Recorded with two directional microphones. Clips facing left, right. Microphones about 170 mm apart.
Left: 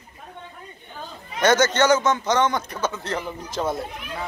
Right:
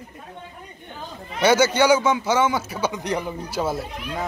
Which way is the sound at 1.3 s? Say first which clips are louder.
Right 1 dB; 10° right (ahead or behind).